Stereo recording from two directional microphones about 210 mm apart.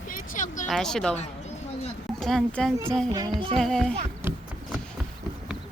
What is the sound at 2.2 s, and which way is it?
Speech, centre (ahead or behind).